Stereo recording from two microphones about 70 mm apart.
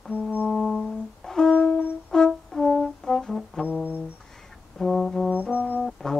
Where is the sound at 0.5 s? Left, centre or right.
Centre.